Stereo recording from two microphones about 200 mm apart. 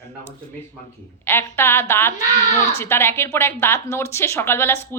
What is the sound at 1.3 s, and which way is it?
A woman's voice, 10° left (ahead or behind).